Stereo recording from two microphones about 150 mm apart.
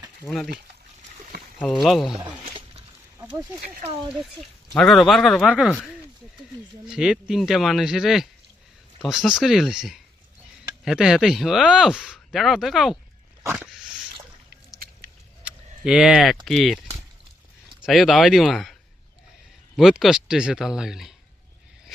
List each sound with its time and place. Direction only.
1.8 s speech: centre (ahead or behind)
2.4 s a sound: 40° right (ahead or behind)
3.8 s speech: 40° right (ahead or behind)
4.8 s speech: centre (ahead or behind)
6.8 s speech: 5° right (ahead or behind)
15.4 s speech: 5° right (ahead or behind)